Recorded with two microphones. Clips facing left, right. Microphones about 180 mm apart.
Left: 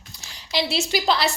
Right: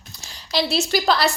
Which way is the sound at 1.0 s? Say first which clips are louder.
Right 2 dB; 45° right (ahead or behind).